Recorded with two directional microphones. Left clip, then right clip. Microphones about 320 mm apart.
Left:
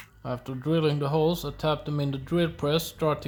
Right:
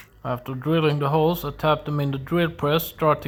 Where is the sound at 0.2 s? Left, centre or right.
Centre.